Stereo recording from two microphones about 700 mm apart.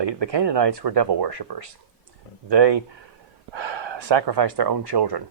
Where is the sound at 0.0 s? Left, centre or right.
Right.